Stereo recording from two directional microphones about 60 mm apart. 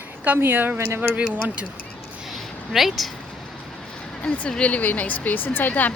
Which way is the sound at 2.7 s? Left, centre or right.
Centre.